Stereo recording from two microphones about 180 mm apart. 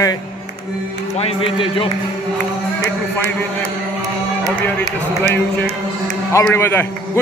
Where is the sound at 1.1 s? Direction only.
35° left (ahead or behind).